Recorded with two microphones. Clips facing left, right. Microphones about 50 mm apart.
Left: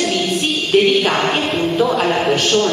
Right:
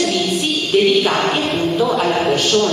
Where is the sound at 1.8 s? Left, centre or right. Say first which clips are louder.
Left 1 dB; centre.